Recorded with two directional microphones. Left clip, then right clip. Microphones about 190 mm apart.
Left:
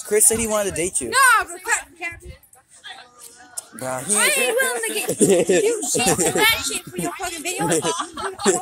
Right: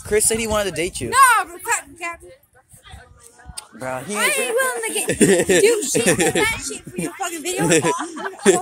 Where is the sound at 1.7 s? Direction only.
70° right (ahead or behind).